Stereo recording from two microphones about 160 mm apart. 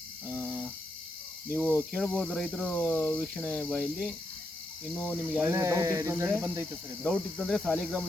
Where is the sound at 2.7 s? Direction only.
15° left (ahead or behind).